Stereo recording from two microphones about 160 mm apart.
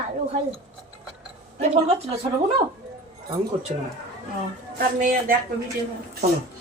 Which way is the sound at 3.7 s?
45° right (ahead or behind).